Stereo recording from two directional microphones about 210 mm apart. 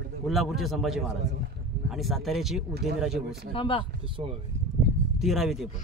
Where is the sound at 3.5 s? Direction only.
25° left (ahead or behind).